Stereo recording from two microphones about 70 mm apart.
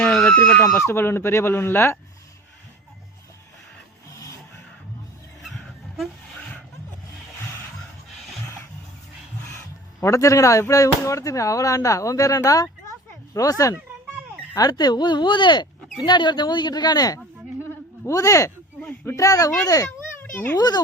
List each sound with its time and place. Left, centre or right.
0.0 s a sound: centre
0.3 s speech: centre
0.8 s speech: left
10.0 s speech: left
14.5 s speech: left
17.6 s a sound: left
18.2 s a child's voice: left
20.1 s a sound: left
20.6 s a child's voice: left